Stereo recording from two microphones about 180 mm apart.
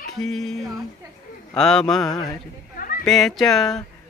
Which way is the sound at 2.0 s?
20° left (ahead or behind).